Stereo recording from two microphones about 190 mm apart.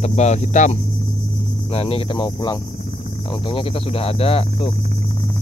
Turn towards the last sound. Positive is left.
turn(degrees=30)  # may be behind; listen again after turning